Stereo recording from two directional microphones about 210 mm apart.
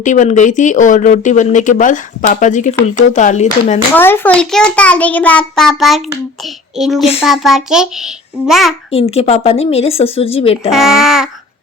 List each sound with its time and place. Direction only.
0.0 s speech: 35° left (ahead or behind)
3.9 s a child's voice: 10° left (ahead or behind)
6.4 s child singing: centre (ahead or behind)
7.2 s a child's voice: centre (ahead or behind)
8.9 s speech: 30° left (ahead or behind)
10.7 s a child's voice: centre (ahead or behind)